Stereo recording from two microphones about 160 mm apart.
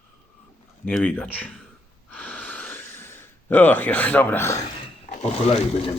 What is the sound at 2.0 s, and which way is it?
Snort, 10° left (ahead or behind).